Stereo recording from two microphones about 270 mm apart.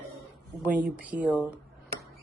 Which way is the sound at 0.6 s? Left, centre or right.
Centre.